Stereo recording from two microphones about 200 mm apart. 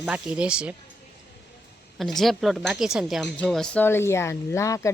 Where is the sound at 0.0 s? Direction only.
5° right (ahead or behind).